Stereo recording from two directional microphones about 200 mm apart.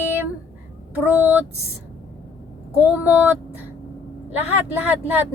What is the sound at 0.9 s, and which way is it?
Speech, 10° right (ahead or behind).